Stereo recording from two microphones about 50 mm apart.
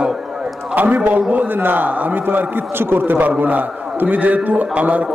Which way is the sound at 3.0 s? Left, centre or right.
Right.